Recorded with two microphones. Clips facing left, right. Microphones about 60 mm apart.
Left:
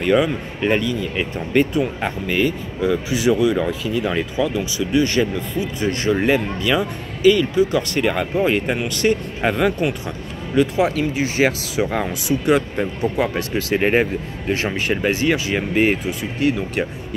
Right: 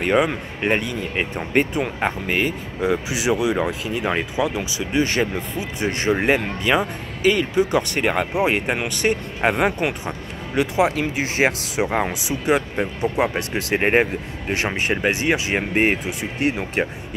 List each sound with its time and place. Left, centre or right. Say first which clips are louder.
0.0 s speech: left 2 dB; right; by 12.8 s centre
13.0 s speech: even; right
14.6 s speech: right 1 dB; right
15.7 s speech: left 2 dB; right
16.2 s speech: left 2 dB; right